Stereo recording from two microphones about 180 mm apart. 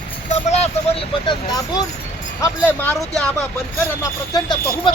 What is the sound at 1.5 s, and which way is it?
Speech, 20° left (ahead or behind).